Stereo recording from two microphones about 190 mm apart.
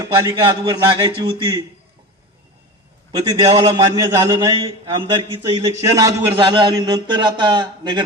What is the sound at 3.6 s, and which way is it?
Speech, 15° right (ahead or behind).